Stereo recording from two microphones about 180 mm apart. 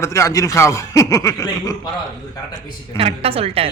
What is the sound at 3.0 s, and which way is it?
Speech, 35° right (ahead or behind).